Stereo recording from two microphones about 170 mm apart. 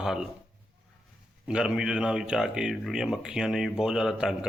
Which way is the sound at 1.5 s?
5° right (ahead or behind).